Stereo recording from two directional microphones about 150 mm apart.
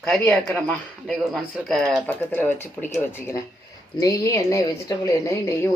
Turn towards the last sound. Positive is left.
turn(degrees=20)  # may be behind; listen again after turning